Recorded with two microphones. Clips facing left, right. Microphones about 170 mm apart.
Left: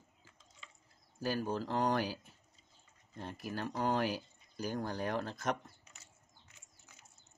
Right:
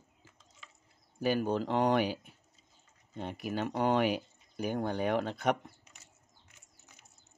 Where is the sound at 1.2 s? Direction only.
65° right (ahead or behind).